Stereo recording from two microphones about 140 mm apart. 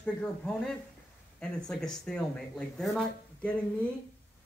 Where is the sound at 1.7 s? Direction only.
5° left (ahead or behind).